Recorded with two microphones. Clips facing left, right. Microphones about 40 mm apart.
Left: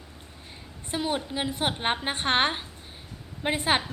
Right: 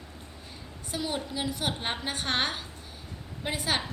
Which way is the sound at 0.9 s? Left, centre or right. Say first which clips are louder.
Left 4 dB; left.